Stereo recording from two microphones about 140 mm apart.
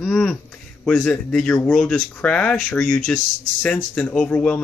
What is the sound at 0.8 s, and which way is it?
Speech, 10° left (ahead or behind).